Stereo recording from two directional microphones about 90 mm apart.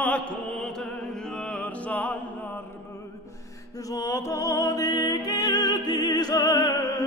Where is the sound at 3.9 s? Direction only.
35° left (ahead or behind).